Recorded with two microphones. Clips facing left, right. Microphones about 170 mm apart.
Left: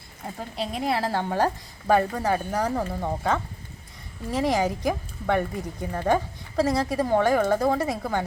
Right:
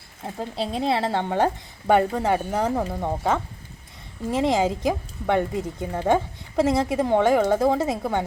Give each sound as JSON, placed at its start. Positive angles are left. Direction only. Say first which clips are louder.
{"t": 0.3, "sound": "speech", "louder": "right 4 dB", "side_deg": -30}